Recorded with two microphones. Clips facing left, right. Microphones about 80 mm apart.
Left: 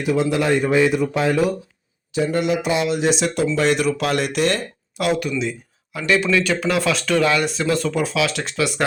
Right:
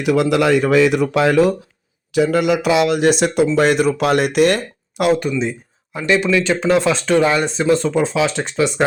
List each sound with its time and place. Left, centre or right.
0.0 s speech: right
5.4 s a sound: right
6.4 s speech: right